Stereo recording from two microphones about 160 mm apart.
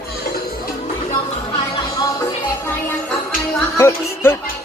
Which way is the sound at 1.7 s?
25° left (ahead or behind).